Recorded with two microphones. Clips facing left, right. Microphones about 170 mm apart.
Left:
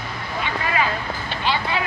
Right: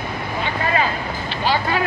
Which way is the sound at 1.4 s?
45° right (ahead or behind).